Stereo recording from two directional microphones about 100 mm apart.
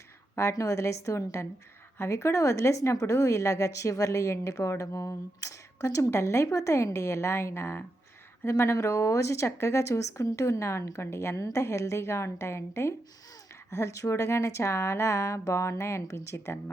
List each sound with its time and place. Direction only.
0.3 s a woman's voice: 30° left (ahead or behind)